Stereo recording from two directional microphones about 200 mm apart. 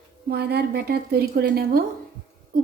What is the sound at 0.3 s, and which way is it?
A woman's voice, 55° right (ahead or behind).